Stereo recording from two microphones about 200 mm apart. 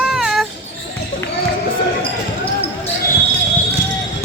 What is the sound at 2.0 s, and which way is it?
Basketball bounce, 25° left (ahead or behind).